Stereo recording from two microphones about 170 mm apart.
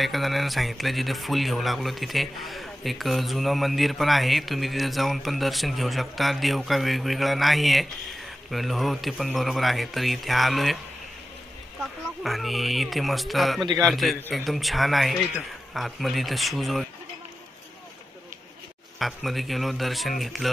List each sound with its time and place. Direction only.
0.0 s speech: centre (ahead or behind)
11.8 s speech: centre (ahead or behind)
18.9 s speech: centre (ahead or behind)